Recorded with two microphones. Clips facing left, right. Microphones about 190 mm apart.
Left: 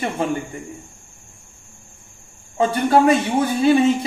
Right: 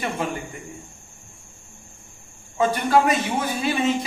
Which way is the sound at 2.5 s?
30° left (ahead or behind).